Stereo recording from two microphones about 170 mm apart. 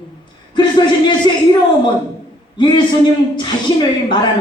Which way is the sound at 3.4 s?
25° left (ahead or behind).